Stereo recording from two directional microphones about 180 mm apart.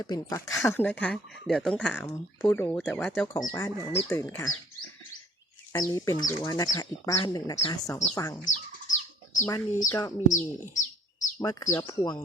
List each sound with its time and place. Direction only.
0.0 s speech: 20° left (ahead or behind); by 3.2 s 5° left (ahead or behind)
3.3 s speech: 15° left (ahead or behind)
5.7 s speech: 20° left (ahead or behind)
8.4 s bird: 45° left (ahead or behind)
9.9 s speech: 15° left (ahead or behind)
10.2 s bird: 45° left (ahead or behind)
11.3 s speech: 20° left (ahead or behind)